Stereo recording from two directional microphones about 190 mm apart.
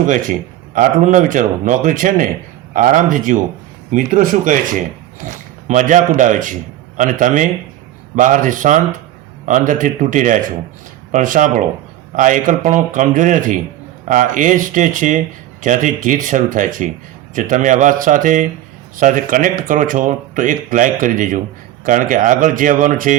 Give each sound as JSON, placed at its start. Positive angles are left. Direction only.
{"t": 0.0, "sound": "a man's voice", "side_deg": -45}